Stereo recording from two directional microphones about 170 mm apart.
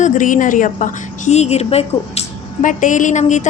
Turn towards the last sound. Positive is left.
turn(degrees=45)  # may be behind; listen again after turning